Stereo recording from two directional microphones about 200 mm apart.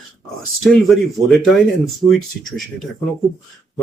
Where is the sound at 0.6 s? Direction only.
Centre (ahead or behind).